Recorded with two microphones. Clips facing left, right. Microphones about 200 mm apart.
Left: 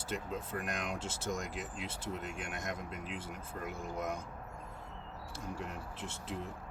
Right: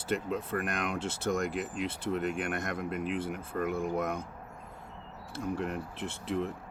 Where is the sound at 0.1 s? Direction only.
65° right (ahead or behind).